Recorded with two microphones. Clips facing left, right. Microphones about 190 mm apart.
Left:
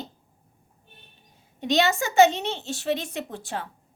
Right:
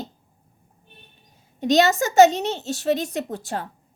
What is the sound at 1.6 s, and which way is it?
A woman's voice, 40° right (ahead or behind).